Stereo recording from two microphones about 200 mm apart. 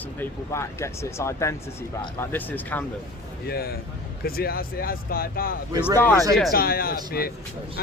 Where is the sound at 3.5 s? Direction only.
50° left (ahead or behind).